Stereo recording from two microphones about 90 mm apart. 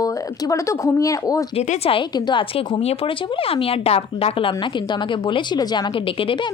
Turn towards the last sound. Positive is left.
turn(degrees=70)  # may be behind; listen again after turning